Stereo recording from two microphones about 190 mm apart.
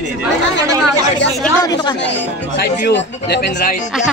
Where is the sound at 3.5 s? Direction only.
40° left (ahead or behind).